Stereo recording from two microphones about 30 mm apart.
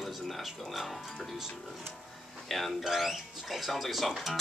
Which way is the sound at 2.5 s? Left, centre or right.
Centre.